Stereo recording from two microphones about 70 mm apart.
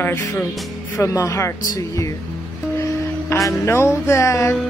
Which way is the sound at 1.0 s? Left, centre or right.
Left.